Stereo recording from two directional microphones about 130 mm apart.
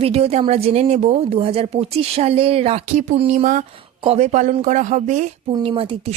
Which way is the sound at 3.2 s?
80° right.